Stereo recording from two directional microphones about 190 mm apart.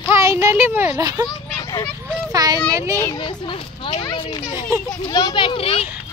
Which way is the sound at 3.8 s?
25° left (ahead or behind).